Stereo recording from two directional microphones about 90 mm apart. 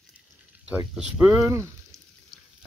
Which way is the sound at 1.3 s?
35° right (ahead or behind).